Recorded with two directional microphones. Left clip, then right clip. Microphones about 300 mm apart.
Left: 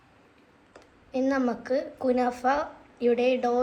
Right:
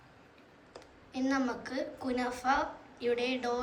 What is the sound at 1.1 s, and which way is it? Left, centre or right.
A woman's voice, centre.